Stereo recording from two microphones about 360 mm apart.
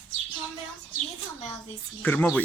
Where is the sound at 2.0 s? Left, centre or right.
Centre.